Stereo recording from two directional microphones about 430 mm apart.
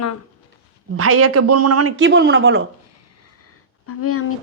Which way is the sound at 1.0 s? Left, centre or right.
Right.